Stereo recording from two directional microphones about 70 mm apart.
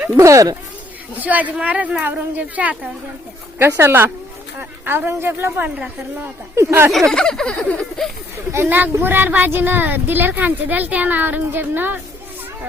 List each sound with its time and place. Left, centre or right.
0.2 s speech: right
1.2 s speech: right
3.8 s a woman's voice: right
5.6 s speech: right
6.6 s a woman's voice: right
7.1 s a sound: centre
8.6 s speech: right